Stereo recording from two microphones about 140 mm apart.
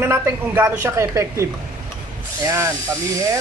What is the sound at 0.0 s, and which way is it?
A woman's voice, 15° right (ahead or behind).